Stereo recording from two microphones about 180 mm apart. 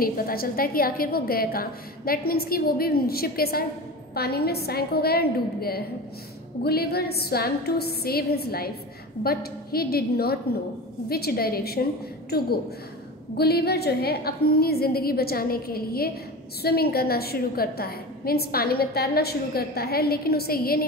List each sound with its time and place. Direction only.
0.0 s a woman's voice: 55° left (ahead or behind)